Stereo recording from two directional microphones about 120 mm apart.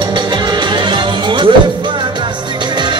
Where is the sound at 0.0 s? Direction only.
40° right (ahead or behind).